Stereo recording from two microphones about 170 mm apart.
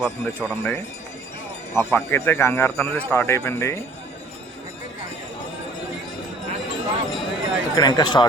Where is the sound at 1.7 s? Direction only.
15° left (ahead or behind).